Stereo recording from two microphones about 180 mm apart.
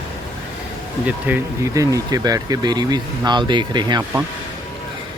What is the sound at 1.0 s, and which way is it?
Speech, 15° right (ahead or behind).